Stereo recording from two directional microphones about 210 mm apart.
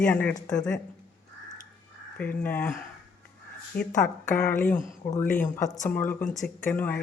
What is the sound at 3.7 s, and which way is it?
Speech, 45° left (ahead or behind).